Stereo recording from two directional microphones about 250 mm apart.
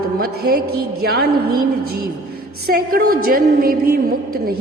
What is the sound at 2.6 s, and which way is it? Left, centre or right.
A woman's voice, right.